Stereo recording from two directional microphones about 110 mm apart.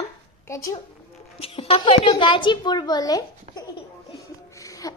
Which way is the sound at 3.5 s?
75° right (ahead or behind).